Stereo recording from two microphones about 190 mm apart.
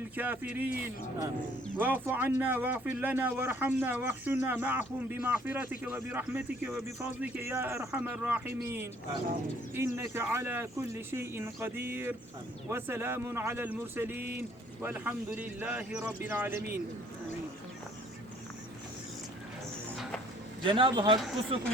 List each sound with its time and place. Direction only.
0.2 s speech: 10° right (ahead or behind)
20.7 s speech: 25° right (ahead or behind)